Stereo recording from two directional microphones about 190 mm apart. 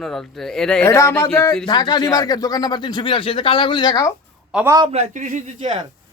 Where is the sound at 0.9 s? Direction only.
15° left (ahead or behind).